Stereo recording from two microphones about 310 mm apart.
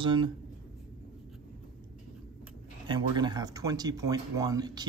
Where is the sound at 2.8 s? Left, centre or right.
Centre.